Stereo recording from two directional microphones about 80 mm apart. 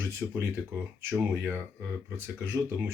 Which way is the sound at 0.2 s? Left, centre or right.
Centre.